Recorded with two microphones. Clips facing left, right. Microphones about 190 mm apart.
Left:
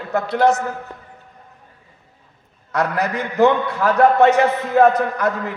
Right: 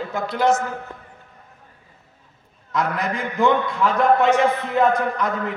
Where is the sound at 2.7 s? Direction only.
70° left (ahead or behind).